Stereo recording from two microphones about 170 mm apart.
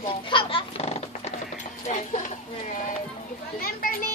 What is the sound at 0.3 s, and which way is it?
Dog, 30° left (ahead or behind).